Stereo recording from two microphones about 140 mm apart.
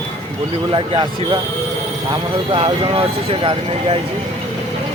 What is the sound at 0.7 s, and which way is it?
Speech, 35° right (ahead or behind).